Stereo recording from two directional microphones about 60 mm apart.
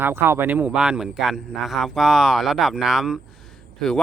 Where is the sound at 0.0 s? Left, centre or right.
Right.